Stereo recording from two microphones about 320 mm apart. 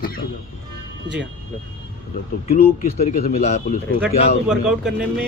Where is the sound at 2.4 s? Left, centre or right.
Left.